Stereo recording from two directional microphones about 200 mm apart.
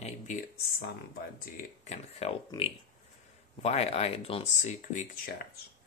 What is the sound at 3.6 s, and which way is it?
Speech, 30° left (ahead or behind).